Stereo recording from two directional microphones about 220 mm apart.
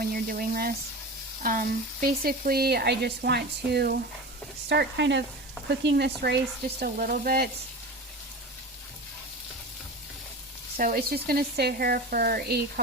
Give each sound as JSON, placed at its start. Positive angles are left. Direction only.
{"t": 0.0, "sound": "speech", "side_deg": -40}
{"t": 10.8, "sound": "speech", "side_deg": -40}